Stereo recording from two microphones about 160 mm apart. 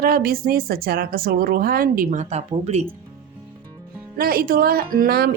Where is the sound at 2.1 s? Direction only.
45° right (ahead or behind).